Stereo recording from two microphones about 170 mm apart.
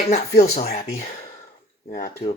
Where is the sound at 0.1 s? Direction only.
40° left (ahead or behind).